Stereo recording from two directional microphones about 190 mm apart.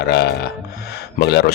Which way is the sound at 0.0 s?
60° left (ahead or behind).